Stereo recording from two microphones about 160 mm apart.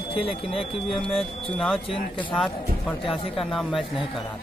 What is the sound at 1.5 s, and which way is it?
Speech, centre (ahead or behind).